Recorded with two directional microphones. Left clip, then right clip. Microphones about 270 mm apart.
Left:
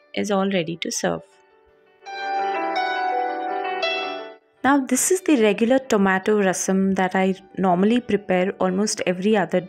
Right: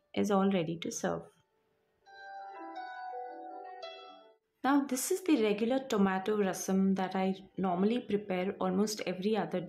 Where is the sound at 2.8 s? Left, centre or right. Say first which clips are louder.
Left 16 dB; left.